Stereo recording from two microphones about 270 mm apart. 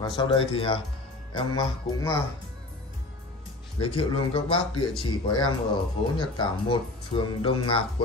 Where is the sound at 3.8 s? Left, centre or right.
Left.